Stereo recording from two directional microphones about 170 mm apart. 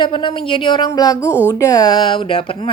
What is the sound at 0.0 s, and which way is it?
Speech, 30° left (ahead or behind).